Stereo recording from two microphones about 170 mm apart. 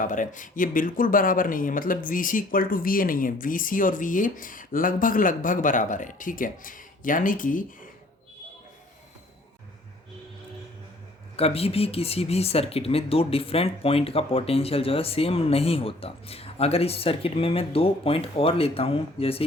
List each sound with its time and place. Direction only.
0.0 s speech: 50° left (ahead or behind)
11.3 s speech: 35° left (ahead or behind)